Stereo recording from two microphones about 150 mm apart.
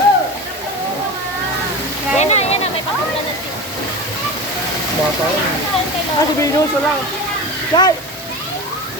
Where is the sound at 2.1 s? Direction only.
45° left (ahead or behind).